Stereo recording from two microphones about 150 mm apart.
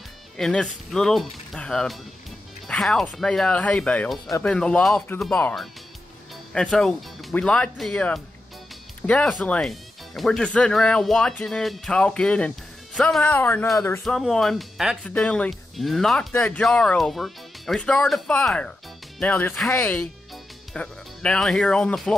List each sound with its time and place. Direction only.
0.4 s speech: 5° left (ahead or behind)
14.0 s speech: centre (ahead or behind)